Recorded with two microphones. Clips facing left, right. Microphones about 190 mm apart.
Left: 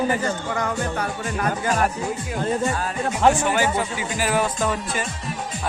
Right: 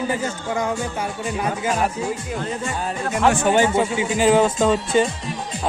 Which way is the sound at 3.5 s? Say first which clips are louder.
Right 5 dB; 25° right (ahead or behind).